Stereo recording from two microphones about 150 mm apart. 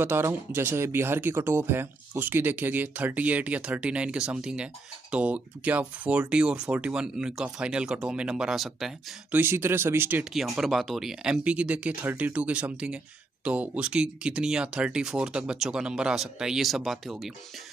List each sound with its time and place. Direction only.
0.0 s speech: 15° right (ahead or behind)
9.3 s speech: 15° right (ahead or behind)
10.3 s speech: centre (ahead or behind)